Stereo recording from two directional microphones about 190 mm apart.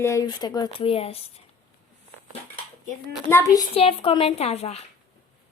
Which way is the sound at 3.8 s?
30° left (ahead or behind).